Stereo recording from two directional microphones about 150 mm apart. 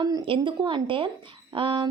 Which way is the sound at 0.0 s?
30° right (ahead or behind).